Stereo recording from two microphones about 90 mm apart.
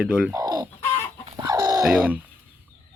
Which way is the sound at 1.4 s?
45° right (ahead or behind).